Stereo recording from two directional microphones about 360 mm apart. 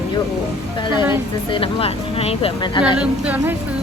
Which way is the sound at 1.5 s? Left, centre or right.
Centre.